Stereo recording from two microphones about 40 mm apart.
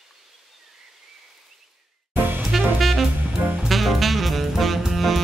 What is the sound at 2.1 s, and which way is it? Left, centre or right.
Music, right.